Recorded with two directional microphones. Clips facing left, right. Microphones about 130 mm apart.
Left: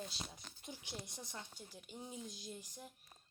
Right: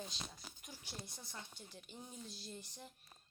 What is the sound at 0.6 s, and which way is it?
Speech, 20° left (ahead or behind).